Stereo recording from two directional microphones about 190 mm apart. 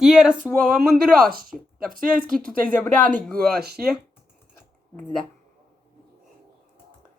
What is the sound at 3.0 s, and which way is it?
Speech, 5° left (ahead or behind).